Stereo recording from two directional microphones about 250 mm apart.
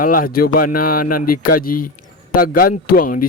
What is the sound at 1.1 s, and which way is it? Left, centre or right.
Speech, left.